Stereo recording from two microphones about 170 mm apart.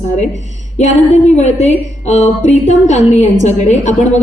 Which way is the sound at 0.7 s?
40° left (ahead or behind).